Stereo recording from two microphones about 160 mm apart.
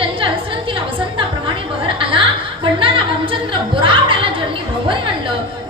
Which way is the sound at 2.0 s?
35° right (ahead or behind).